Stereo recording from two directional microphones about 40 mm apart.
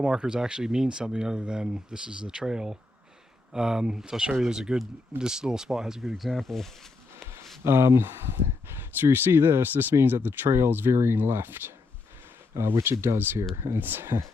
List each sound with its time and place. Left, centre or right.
0.0 s speech: right
6.1 s speech: centre
7.2 s a sound: centre
7.6 s speech: right
12.6 s speech: right